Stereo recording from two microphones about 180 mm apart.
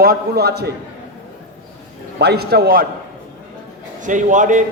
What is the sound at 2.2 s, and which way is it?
Speech, 65° right (ahead or behind).